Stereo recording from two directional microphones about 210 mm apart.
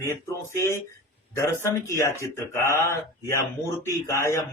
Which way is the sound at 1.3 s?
15° left (ahead or behind).